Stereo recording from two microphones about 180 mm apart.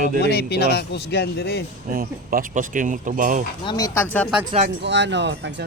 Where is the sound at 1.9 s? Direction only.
55° right (ahead or behind).